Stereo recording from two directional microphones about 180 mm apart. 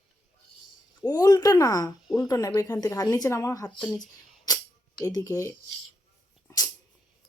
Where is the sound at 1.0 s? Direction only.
20° left (ahead or behind).